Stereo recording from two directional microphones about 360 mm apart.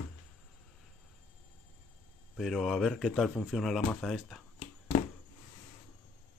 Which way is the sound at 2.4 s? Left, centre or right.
Centre.